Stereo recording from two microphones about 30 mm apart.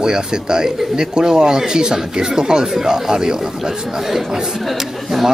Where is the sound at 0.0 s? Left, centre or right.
Right.